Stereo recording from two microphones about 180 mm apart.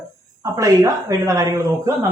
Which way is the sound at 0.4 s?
20° right (ahead or behind).